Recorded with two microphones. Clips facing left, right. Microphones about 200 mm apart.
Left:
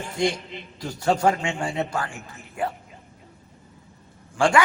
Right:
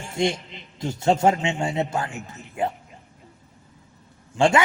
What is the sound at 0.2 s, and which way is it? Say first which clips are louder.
A man's voice: right 1 dB; 25° right (ahead or behind).